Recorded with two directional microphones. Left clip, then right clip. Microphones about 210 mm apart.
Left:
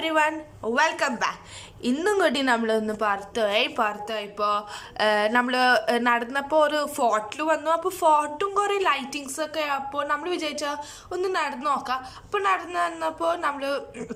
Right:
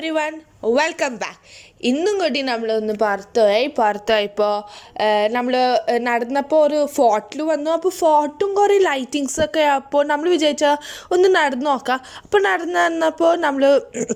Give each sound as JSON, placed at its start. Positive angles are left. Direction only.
{"t": 0.0, "sound": "a woman's voice", "side_deg": -15}
{"t": 3.0, "sound": "a woman's voice", "side_deg": -25}
{"t": 4.9, "sound": "speech", "side_deg": -15}